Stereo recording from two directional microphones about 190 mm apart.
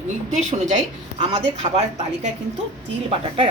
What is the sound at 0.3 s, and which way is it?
A woman's voice, 40° right (ahead or behind).